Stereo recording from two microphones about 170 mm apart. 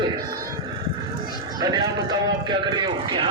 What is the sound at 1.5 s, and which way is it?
A man's voice, 25° right (ahead or behind).